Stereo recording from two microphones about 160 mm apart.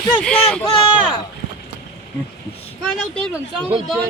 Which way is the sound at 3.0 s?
5° left (ahead or behind).